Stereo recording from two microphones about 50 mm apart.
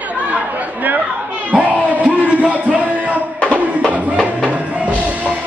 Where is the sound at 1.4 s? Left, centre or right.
Right.